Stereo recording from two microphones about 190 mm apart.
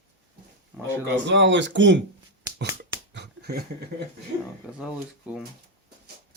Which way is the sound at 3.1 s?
60° right (ahead or behind).